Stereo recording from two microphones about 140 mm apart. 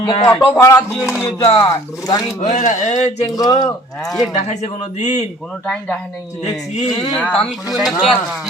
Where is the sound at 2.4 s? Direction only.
55° left (ahead or behind).